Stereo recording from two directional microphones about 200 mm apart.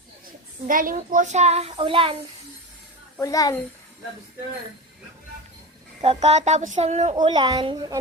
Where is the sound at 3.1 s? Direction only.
15° left (ahead or behind).